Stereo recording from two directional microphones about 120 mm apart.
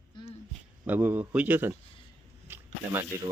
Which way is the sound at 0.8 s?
15° right (ahead or behind).